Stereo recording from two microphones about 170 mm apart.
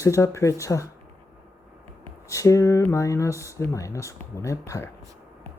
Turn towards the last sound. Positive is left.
turn(degrees=15)  # may be behind; listen again after turning